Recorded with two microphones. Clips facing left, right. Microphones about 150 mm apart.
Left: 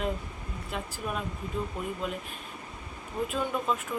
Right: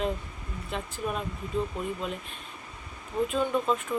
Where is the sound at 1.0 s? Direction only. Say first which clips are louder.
Right 3 dB; 5° left (ahead or behind).